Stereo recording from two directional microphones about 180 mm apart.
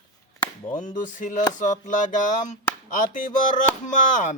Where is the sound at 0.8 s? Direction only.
45° left (ahead or behind).